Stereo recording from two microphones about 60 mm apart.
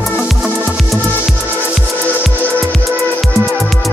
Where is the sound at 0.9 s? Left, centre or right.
Centre.